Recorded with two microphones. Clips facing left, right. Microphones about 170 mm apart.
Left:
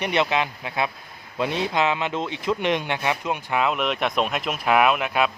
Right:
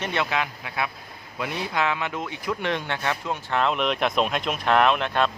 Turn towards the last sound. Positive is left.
turn(degrees=5)  # may be behind; listen again after turning